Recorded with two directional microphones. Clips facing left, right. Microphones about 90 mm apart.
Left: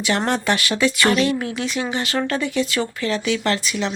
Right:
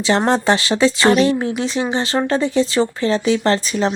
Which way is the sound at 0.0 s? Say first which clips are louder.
Right 5 dB; 25° right (ahead or behind).